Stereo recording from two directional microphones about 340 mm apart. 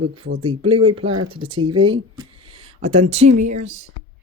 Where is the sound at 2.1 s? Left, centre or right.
Centre.